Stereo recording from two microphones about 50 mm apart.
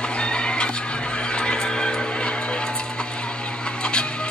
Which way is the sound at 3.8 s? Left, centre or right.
Centre.